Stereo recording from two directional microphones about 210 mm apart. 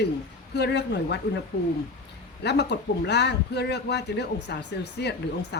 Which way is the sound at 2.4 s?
55° left (ahead or behind).